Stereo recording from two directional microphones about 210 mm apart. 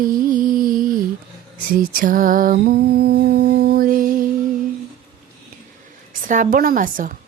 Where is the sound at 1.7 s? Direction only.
40° right (ahead or behind).